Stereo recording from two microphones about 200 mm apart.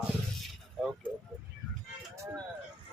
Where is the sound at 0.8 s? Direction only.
5° right (ahead or behind).